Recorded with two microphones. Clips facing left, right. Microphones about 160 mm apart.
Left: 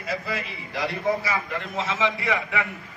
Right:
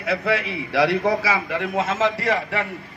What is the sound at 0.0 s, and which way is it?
A man's voice, 70° right (ahead or behind).